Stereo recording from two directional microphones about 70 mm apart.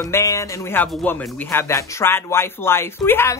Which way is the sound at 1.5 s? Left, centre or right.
Left.